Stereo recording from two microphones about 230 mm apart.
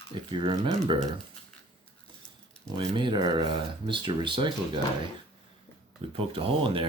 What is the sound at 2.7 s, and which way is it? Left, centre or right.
Speech, right.